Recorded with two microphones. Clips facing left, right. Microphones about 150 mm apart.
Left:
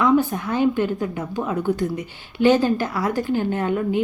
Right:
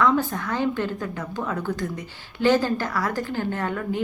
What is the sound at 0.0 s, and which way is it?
A woman's voice, 15° left (ahead or behind).